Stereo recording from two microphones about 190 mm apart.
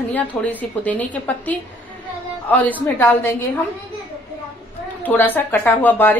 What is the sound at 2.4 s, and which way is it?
Speech, 10° left (ahead or behind).